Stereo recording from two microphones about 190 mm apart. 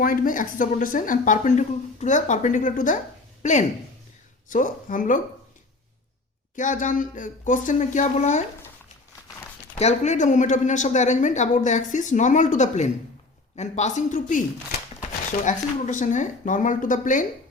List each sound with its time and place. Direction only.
0.0 s a woman's voice: 45° left (ahead or behind)
6.6 s a woman's voice: 40° left (ahead or behind)
9.7 s a woman's voice: 35° left (ahead or behind)